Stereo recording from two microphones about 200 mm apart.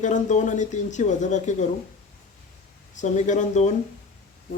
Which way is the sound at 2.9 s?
35° left (ahead or behind).